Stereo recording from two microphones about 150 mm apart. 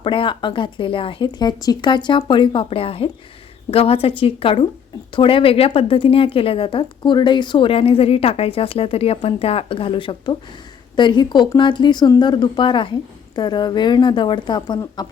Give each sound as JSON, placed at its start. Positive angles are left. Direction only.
{"t": 0.0, "sound": "a woman's voice", "side_deg": 35}